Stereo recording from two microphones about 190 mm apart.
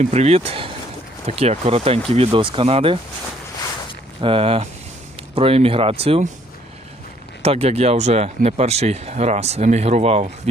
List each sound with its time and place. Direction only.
0.0 s speech: 35° right (ahead or behind)
4.2 s speech: 30° right (ahead or behind)
7.4 s speech: 30° right (ahead or behind)